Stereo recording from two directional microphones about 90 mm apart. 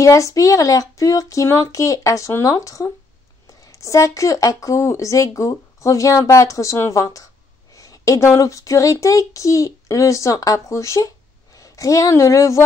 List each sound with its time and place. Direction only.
0.0 s a woman's voice: 35° left (ahead or behind)